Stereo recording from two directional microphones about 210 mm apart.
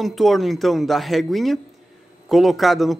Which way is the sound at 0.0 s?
Centre (ahead or behind).